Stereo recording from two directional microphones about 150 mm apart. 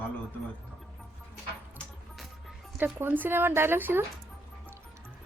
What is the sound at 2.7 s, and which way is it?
Speech, 10° right (ahead or behind).